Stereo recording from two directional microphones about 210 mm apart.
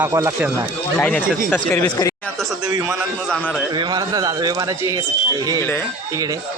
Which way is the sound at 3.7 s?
20° right (ahead or behind).